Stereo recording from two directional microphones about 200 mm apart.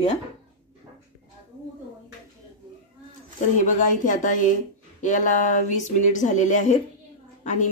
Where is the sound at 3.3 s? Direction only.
40° left (ahead or behind).